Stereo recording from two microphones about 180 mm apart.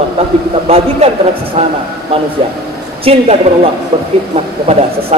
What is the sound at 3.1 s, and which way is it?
Speech, 35° right (ahead or behind).